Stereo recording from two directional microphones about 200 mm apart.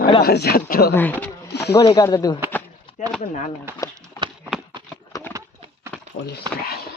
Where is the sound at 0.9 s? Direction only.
10° left (ahead or behind).